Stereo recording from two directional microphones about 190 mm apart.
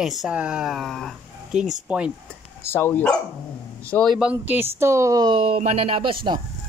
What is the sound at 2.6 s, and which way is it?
Speech, 10° left (ahead or behind).